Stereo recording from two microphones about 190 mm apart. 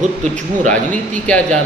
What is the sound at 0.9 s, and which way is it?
Speech, 5° left (ahead or behind).